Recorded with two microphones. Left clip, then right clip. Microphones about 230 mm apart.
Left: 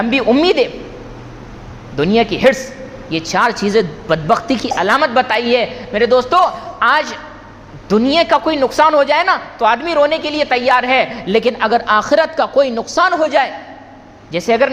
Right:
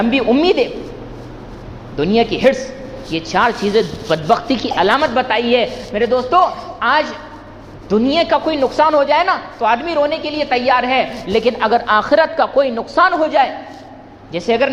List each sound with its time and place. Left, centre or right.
0.0 s a man's voice: left
2.0 s a man's voice: left